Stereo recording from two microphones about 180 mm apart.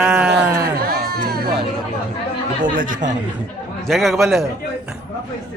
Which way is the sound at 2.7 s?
50° right (ahead or behind).